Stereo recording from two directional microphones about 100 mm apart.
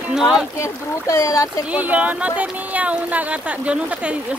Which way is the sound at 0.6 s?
30° left (ahead or behind).